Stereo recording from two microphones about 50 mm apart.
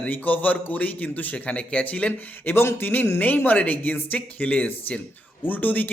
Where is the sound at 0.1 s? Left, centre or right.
Left.